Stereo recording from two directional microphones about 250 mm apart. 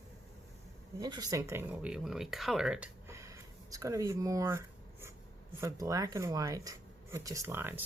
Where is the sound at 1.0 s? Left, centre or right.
Centre.